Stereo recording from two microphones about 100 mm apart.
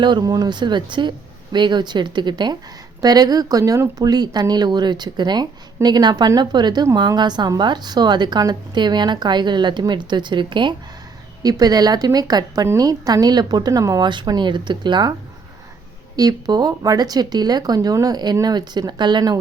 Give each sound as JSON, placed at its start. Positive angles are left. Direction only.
{"t": 0.0, "sound": "speech", "side_deg": -50}
{"t": 11.4, "sound": "speech", "side_deg": -40}
{"t": 14.0, "sound": "speech", "side_deg": -50}
{"t": 16.1, "sound": "speech", "side_deg": -40}